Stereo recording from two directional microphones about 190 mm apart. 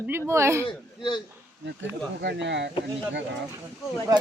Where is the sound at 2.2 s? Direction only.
65° right (ahead or behind).